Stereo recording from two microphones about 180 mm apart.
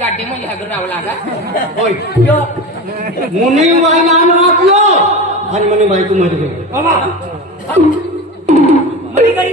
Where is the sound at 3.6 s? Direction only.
40° right (ahead or behind).